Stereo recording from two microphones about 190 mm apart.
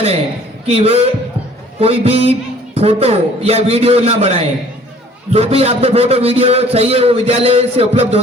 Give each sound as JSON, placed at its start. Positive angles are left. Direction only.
{"t": 0.7, "sound": "a man's voice", "side_deg": -30}